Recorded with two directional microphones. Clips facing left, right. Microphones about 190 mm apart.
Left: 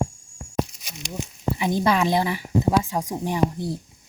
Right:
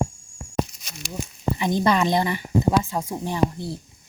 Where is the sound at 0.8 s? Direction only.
15° left (ahead or behind).